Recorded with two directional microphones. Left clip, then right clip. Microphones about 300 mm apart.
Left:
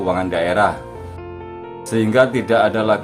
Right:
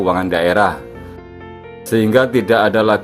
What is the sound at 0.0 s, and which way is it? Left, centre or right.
Speech, centre.